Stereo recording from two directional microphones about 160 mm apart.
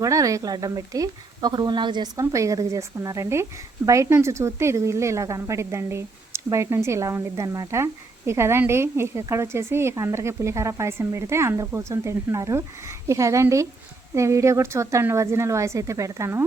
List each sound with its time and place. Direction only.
0.0 s speech: 20° right (ahead or behind)